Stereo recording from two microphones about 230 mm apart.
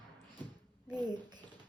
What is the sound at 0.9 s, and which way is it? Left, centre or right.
Speech, centre.